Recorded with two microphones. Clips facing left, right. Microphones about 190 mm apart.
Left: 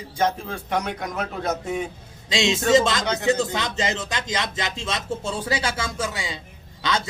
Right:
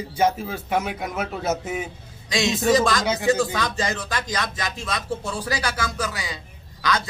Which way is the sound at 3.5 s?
20° left (ahead or behind).